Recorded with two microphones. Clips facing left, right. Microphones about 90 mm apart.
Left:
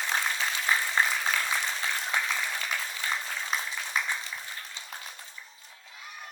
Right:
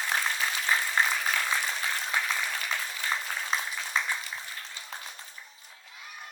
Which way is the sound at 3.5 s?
30° right (ahead or behind).